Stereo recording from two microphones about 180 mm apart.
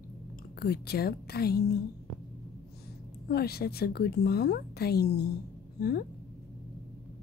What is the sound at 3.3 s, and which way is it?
Speech, 60° left (ahead or behind).